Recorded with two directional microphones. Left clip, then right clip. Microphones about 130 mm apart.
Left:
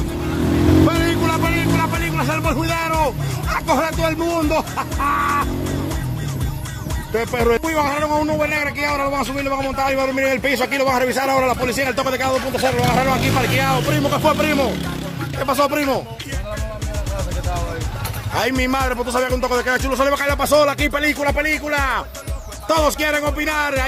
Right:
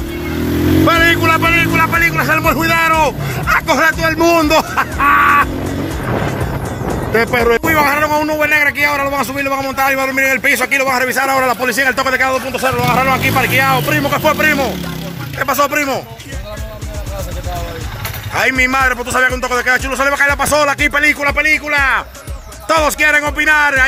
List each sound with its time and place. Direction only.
0.8 s music: centre (ahead or behind)
4.2 s speech: 10° right (ahead or behind)
7.2 s a man's voice: 10° right (ahead or behind)
10.1 s a man's voice: 15° left (ahead or behind)
11.4 s speech: 5° right (ahead or behind)
14.2 s a man's voice: 10° left (ahead or behind)
18.3 s speech: 25° left (ahead or behind)
22.7 s a man's voice: 10° left (ahead or behind)